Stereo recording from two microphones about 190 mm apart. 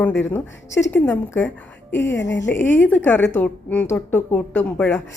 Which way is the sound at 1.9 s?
70° left (ahead or behind).